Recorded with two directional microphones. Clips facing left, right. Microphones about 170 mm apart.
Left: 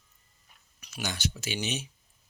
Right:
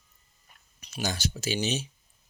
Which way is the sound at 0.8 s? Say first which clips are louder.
Right 3 dB; 30° right (ahead or behind).